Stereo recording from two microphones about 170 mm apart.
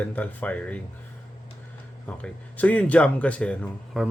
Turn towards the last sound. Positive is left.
turn(degrees=0)  # may be behind; listen again after turning